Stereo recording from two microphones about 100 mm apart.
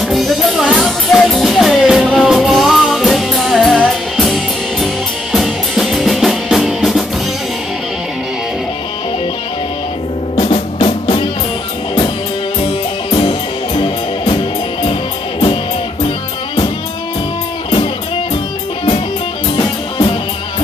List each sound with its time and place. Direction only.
0.0 s music: centre (ahead or behind)
5.3 s music: centre (ahead or behind)
10.4 s music: 60° left (ahead or behind)
13.1 s music: 55° left (ahead or behind)
19.6 s music: 55° left (ahead or behind)